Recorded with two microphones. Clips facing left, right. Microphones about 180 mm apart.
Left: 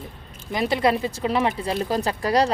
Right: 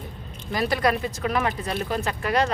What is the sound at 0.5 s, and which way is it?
Speech, 25° left (ahead or behind).